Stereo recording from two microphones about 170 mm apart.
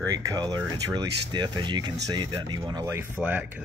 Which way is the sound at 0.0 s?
20° right (ahead or behind).